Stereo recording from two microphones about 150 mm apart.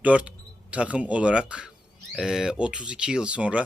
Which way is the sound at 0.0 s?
10° right (ahead or behind).